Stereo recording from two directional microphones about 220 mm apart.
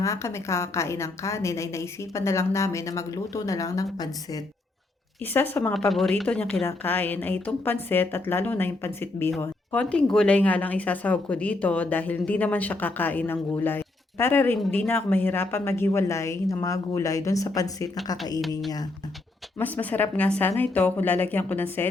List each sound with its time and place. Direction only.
0.0 s a woman's voice: 15° left (ahead or behind)
19.5 s a woman's voice: 10° left (ahead or behind)